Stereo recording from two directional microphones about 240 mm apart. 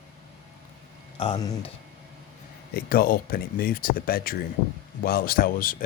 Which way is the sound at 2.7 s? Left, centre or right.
Left.